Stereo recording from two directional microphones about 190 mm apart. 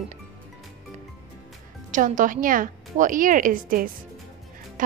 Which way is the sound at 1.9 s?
45° right (ahead or behind).